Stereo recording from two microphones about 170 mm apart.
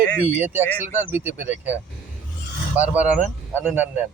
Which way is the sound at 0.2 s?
10° right (ahead or behind).